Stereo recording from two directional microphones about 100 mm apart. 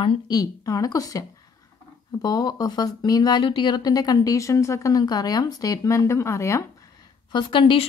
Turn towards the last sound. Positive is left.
turn(degrees=60)  # may be behind; listen again after turning